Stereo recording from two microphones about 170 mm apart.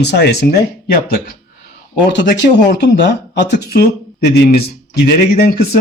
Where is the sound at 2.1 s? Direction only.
90° left.